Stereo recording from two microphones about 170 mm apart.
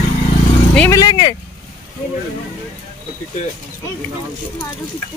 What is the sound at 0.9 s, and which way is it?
Speech, 25° left (ahead or behind).